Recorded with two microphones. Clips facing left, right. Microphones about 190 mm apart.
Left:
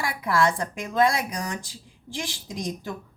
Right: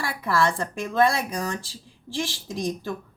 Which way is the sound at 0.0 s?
15° left (ahead or behind).